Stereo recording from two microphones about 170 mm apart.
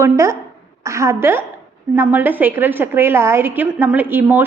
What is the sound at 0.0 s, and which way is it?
A woman's voice, 15° right (ahead or behind).